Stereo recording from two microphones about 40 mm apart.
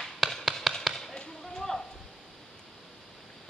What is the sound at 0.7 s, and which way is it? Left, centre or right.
Basketball bounce, centre.